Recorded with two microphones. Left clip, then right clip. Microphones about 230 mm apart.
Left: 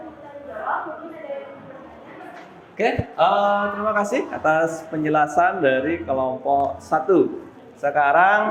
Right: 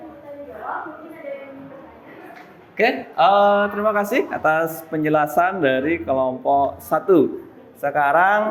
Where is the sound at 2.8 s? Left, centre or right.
Right.